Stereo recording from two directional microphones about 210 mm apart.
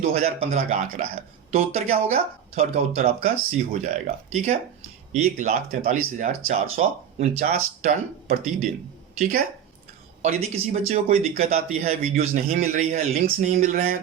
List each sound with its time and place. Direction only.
0.0 s speech: 30° right (ahead or behind)
10.2 s speech: 30° right (ahead or behind)